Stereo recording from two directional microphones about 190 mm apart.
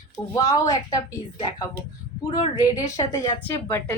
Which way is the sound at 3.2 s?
10° left (ahead or behind).